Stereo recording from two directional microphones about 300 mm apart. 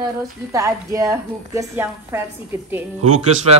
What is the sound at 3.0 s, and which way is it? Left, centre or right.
Speech, right.